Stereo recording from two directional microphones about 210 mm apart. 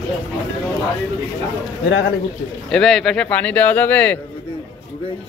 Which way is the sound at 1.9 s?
55° left (ahead or behind).